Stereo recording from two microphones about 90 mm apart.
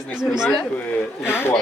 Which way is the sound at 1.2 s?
25° left (ahead or behind).